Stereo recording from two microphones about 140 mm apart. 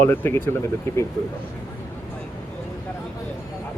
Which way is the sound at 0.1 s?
15° left (ahead or behind).